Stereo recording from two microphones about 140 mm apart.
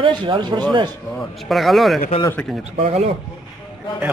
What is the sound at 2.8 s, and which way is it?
Speech, 50° right (ahead or behind).